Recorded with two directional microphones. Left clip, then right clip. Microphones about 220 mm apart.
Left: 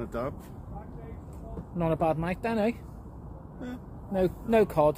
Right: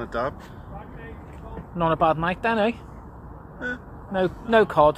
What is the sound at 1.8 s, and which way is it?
Speech, 5° right (ahead or behind).